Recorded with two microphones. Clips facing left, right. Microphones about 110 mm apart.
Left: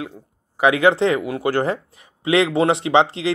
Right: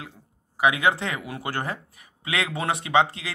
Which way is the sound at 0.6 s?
30° left (ahead or behind).